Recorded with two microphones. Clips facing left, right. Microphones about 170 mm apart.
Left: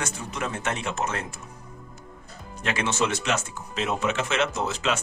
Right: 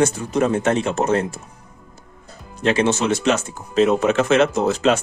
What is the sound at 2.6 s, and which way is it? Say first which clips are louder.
Speech: right 8 dB; 30° right (ahead or behind).